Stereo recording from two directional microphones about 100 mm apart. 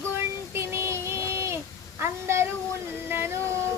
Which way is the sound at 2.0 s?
25° right (ahead or behind).